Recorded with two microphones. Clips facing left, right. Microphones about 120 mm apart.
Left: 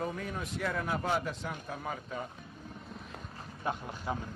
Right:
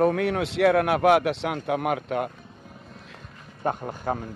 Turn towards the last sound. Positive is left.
turn(degrees=-50)  # may be behind; listen again after turning